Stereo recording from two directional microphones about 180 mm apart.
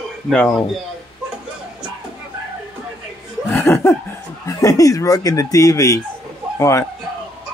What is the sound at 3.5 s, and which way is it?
Chuckle, 10° left (ahead or behind).